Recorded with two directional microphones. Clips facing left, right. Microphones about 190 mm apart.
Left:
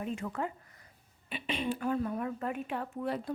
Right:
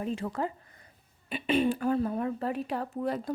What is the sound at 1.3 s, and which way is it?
A woman's voice, 50° right (ahead or behind).